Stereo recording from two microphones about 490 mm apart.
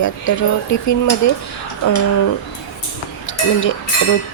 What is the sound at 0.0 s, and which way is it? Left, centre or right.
Speech, left.